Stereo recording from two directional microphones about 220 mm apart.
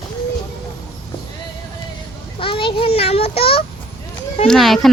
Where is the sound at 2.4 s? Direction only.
25° left (ahead or behind).